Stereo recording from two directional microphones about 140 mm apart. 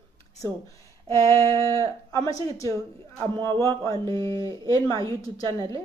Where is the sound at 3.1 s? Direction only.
35° right (ahead or behind).